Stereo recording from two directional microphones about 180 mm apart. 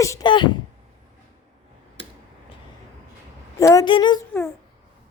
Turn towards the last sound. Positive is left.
turn(degrees=15)  # may be behind; listen again after turning